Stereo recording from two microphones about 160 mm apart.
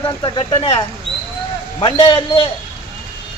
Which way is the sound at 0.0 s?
30° left (ahead or behind).